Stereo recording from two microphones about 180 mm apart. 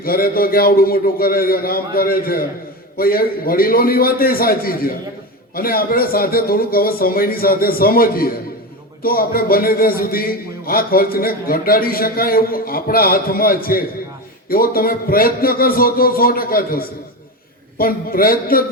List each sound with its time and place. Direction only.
0.0 s a man's voice: 55° left (ahead or behind)